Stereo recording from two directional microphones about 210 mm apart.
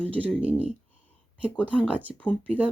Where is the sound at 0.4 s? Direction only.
5° right (ahead or behind).